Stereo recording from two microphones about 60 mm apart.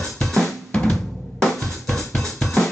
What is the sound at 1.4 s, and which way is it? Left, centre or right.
Music, centre.